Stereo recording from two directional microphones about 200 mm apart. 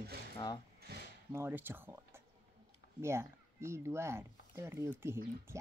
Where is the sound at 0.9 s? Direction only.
50° right (ahead or behind).